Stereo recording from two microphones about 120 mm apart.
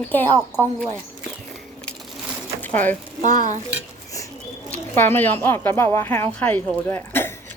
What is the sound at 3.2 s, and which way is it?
Stir, 90° right.